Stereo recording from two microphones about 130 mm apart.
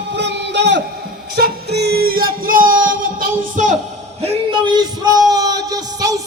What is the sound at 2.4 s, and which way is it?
Music, 90° right.